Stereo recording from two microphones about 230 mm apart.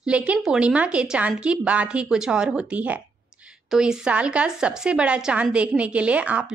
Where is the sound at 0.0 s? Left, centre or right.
Centre.